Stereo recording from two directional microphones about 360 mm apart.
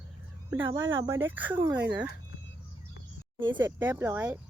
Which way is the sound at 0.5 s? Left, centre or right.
Centre.